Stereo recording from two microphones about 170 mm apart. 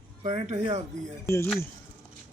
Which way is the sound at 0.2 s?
40° right (ahead or behind).